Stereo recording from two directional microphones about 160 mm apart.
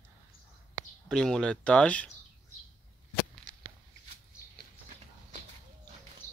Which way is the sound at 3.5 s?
55° right (ahead or behind).